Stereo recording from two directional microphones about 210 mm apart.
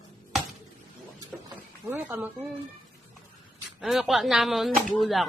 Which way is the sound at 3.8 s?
Centre (ahead or behind).